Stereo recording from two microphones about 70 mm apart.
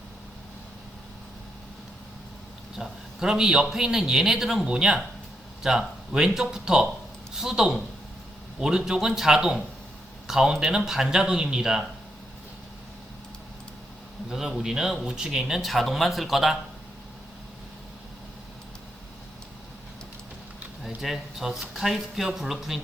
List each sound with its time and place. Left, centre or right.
2.7 s a man's voice: centre
14.3 s a man's voice: centre
21.0 s speech: centre